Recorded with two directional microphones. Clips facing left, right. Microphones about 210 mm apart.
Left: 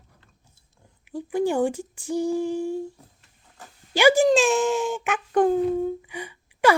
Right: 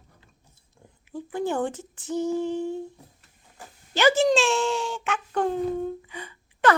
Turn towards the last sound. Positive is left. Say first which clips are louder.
# left 2 dB
turn(degrees=10)  # may be behind; listen again after turning